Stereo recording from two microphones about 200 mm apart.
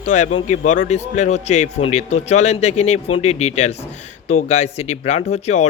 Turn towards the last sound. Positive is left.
turn(degrees=35)  # may be behind; listen again after turning